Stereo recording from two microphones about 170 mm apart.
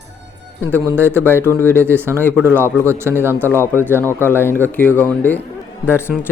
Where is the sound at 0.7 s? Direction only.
15° right (ahead or behind).